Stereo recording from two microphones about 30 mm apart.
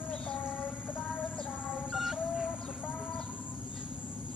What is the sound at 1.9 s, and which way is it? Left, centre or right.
Music, centre.